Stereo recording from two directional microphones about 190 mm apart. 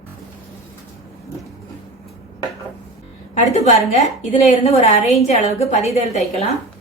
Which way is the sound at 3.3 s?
40° left (ahead or behind).